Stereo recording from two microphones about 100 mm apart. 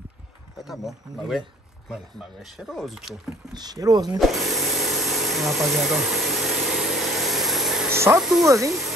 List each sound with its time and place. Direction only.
0.7 s speech: 5° right (ahead or behind)
3.5 s speech: 40° right (ahead or behind)
4.2 s tools: centre (ahead or behind)
7.9 s speech: 25° right (ahead or behind)
8.2 s speech: 5° right (ahead or behind)
8.5 s speech: 30° right (ahead or behind)